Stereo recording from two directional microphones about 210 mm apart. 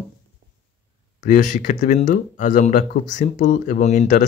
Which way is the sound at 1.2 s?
35° left (ahead or behind).